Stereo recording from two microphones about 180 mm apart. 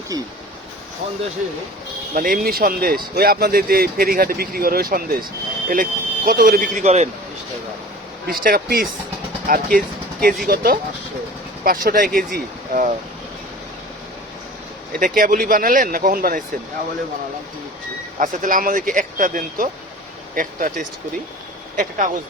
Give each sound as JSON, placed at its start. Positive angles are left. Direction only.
{"t": 2.1, "sound": "speech", "side_deg": -50}
{"t": 8.3, "sound": "speech", "side_deg": -55}
{"t": 14.9, "sound": "speech", "side_deg": -50}
{"t": 18.2, "sound": "speech", "side_deg": -50}
{"t": 21.8, "sound": "speech", "side_deg": -45}